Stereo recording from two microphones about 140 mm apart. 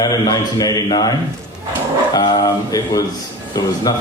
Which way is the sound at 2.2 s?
25° left (ahead or behind).